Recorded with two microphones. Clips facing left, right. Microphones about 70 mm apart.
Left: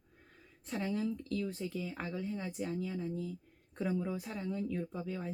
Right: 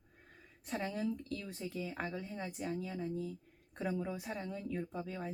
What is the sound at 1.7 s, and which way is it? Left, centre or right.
Speech, centre.